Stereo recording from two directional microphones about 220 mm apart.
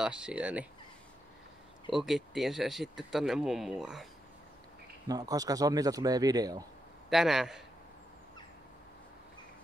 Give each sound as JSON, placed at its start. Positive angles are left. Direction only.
{"t": 0.0, "sound": "speech", "side_deg": -5}
{"t": 1.9, "sound": "speech", "side_deg": 0}
{"t": 5.0, "sound": "a man's voice", "side_deg": -15}
{"t": 7.1, "sound": "speech", "side_deg": 0}